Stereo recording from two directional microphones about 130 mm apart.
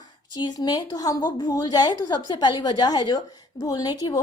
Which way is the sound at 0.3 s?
35° left (ahead or behind).